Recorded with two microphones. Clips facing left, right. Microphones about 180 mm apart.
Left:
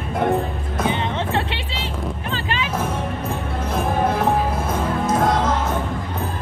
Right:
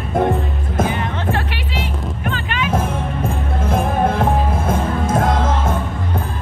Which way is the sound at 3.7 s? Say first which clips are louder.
Right 3 dB; 50° right (ahead or behind).